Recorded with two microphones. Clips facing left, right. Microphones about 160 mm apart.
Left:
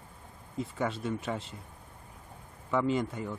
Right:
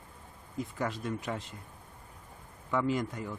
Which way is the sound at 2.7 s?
Centre (ahead or behind).